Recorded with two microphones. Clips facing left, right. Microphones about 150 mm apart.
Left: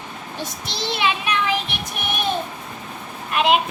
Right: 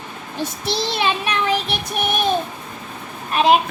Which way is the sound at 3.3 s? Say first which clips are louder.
Right 3 dB; 35° right (ahead or behind).